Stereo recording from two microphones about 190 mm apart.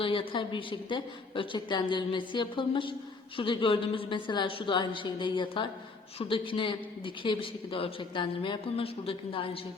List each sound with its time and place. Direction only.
0.0 s a man's voice: 30° left (ahead or behind)